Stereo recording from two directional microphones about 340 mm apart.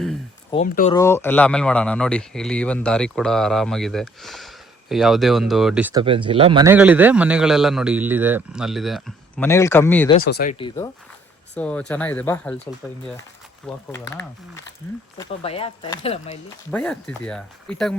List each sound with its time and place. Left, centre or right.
0.5 s speech: centre
0.9 s speech: centre
10.2 s speech: left
11.5 s speech: centre
13.9 s speech: centre
16.7 s speech: centre